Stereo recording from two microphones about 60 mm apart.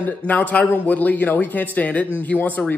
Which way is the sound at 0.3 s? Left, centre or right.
Left.